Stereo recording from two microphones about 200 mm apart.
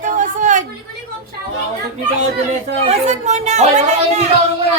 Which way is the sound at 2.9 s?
35° right (ahead or behind).